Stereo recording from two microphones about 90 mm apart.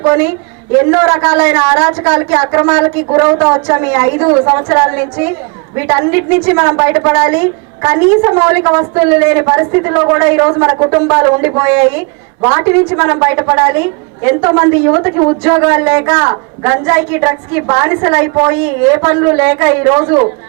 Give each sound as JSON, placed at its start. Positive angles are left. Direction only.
{"t": 0.0, "sound": "a woman's voice", "side_deg": -25}
{"t": 7.8, "sound": "a woman's voice", "side_deg": -35}